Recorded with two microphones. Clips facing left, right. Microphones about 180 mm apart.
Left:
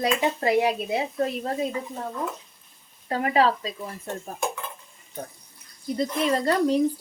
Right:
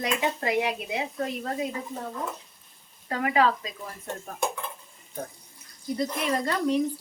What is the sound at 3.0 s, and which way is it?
Speech, 30° left (ahead or behind).